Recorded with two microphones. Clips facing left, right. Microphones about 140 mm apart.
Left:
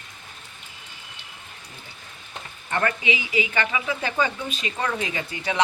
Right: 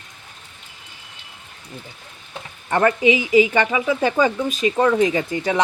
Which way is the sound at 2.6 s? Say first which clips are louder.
Right 8 dB; 35° right (ahead or behind).